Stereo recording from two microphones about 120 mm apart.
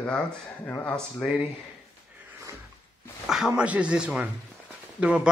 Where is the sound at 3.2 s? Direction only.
Centre (ahead or behind).